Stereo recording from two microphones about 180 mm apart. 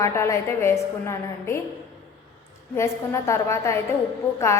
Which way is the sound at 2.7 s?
15° left (ahead or behind).